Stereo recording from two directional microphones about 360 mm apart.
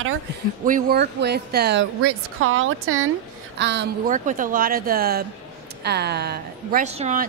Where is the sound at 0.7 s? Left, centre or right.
Right.